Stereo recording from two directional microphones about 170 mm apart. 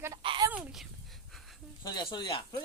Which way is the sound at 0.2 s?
30° right (ahead or behind).